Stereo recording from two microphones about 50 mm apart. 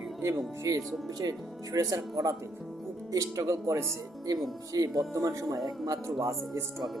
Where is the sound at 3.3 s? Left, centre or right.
Right.